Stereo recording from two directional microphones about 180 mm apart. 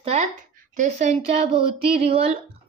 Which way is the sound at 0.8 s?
40° right (ahead or behind).